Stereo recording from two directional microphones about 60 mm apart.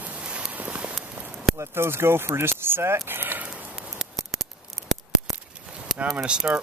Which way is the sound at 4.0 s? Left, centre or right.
Centre.